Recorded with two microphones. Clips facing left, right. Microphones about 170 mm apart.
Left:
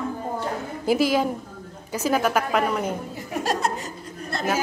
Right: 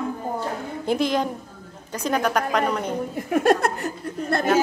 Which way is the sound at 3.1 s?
55° right (ahead or behind).